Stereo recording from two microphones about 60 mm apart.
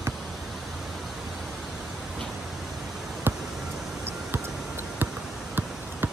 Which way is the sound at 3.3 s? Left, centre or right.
Right.